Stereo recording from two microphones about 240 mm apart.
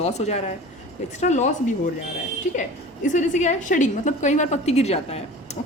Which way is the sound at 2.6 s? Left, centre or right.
Left.